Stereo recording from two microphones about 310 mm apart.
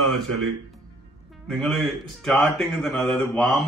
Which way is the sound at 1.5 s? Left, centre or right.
Centre.